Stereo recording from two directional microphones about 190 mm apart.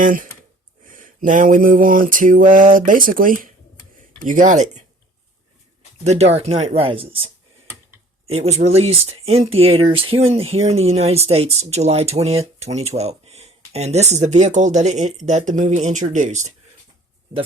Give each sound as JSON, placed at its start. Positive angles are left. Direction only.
{"t": 0.0, "sound": "a sound", "side_deg": -45}
{"t": 4.3, "sound": "speech", "side_deg": -40}
{"t": 6.1, "sound": "speech", "side_deg": -35}
{"t": 8.3, "sound": "speech", "side_deg": -35}